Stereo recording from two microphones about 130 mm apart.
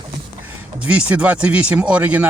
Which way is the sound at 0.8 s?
10° right (ahead or behind).